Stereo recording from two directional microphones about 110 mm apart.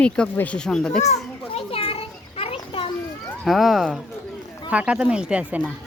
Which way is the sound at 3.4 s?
Centre (ahead or behind).